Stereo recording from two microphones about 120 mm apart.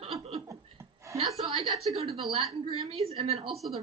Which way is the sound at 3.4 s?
Centre (ahead or behind).